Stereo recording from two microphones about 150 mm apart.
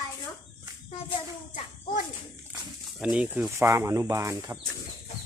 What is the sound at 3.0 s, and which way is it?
Speech, 5° right (ahead or behind).